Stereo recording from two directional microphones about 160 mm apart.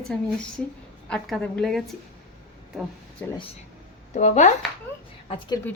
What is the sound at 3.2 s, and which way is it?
Speech, 15° left (ahead or behind).